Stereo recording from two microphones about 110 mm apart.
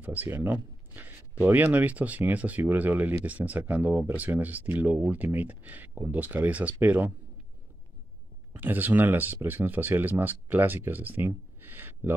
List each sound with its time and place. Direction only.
0.0 s speech: 15° right (ahead or behind)
8.5 s speech: 15° right (ahead or behind)